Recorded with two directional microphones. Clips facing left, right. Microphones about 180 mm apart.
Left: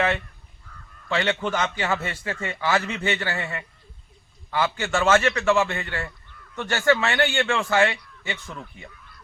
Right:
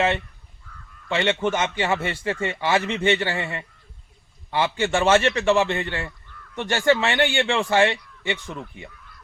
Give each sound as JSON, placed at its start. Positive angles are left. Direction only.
{"t": 1.0, "sound": "a man's voice", "side_deg": -25}
{"t": 8.4, "sound": "speech", "side_deg": -15}